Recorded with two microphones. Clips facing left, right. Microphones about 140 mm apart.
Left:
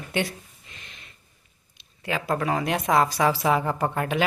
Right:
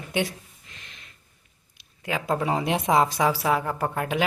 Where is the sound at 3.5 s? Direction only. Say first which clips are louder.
Left 1 dB; centre (ahead or behind).